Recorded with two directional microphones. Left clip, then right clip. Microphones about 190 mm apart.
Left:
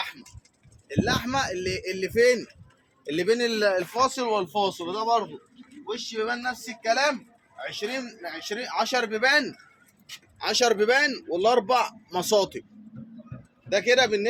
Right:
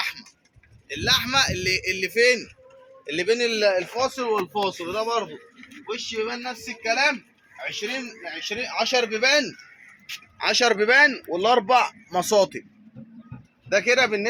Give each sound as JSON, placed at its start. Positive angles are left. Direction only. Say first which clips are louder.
{"t": 0.9, "sound": "a man's voice", "louder": "right 4 dB", "side_deg": 40}
{"t": 4.5, "sound": "speech", "louder": "right 1 dB", "side_deg": 0}
{"t": 6.1, "sound": "speech", "louder": "left 3 dB", "side_deg": 5}
{"t": 7.7, "sound": "a man's voice", "louder": "right 2 dB", "side_deg": -5}
{"t": 8.4, "sound": "a man's voice", "louder": "right 2 dB", "side_deg": -30}
{"t": 9.0, "sound": "a man's voice", "louder": "right 2 dB", "side_deg": -50}
{"t": 10.3, "sound": "a man's voice", "louder": "right 2 dB", "side_deg": -35}
{"t": 13.7, "sound": "a man's voice", "louder": "right 1 dB", "side_deg": -25}